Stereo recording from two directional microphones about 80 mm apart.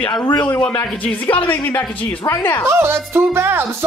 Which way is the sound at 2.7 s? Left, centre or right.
Right.